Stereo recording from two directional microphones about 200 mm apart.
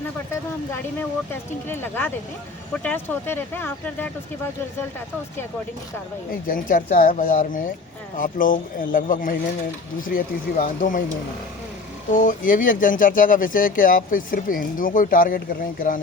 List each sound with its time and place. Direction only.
0.7 s speech: 10° left (ahead or behind)
6.5 s speech: 45° left (ahead or behind)
12.1 s speech: 40° left (ahead or behind)